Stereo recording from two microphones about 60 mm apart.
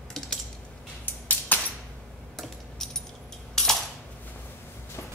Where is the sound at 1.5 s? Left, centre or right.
Left.